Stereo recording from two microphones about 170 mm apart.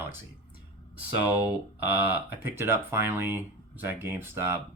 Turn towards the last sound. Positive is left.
turn(degrees=-15)  # may be behind; listen again after turning